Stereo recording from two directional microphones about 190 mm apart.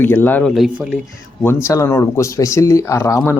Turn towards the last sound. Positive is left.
turn(degrees=15)  # may be behind; listen again after turning